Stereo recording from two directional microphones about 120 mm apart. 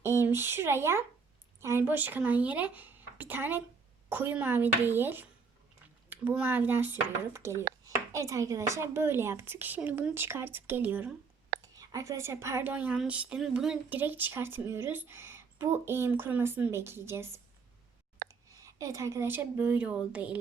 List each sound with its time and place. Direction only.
0.2 s speech: 20° right (ahead or behind)
11.8 s speech: 30° right (ahead or behind)
18.6 s speech: 25° right (ahead or behind); by 20.4 s 10° right (ahead or behind)